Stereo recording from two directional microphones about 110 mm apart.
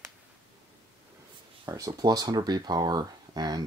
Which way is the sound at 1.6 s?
35° right (ahead or behind).